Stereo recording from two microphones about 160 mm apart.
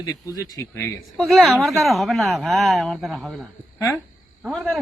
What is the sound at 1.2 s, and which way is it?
Speech, centre (ahead or behind).